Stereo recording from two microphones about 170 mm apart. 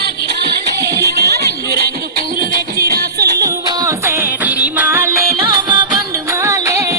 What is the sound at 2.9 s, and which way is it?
Music, 70° right (ahead or behind).